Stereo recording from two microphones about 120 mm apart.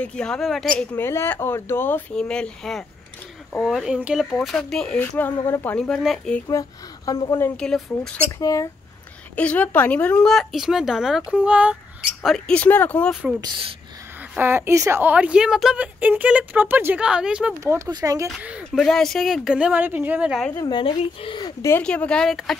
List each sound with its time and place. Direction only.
0.0 s speech: 10° left (ahead or behind)
0.9 s speech: 20° left (ahead or behind); by 4.9 s 5° left (ahead or behind)
4.9 s speech: 15° left (ahead or behind)
5.8 s speech: centre (ahead or behind)
7.1 s speech: 30° left (ahead or behind)
7.5 s speech: 5° left (ahead or behind)
8.4 s speech: 30° left (ahead or behind)
9.3 s speech: 10° left (ahead or behind)
12.5 s speech: 15° left (ahead or behind)
14.3 s a woman's voice: 20° right (ahead or behind)
17.6 s speech: 25° right (ahead or behind)
18.8 s speech: 5° left (ahead or behind)
20.7 s speech: 45° left (ahead or behind)
21.8 s speech: 10° left (ahead or behind)